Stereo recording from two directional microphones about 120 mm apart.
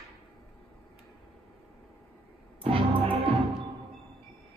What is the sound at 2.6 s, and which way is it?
Music, 50° right (ahead or behind).